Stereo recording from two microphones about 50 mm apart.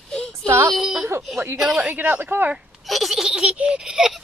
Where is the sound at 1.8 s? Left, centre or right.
Right.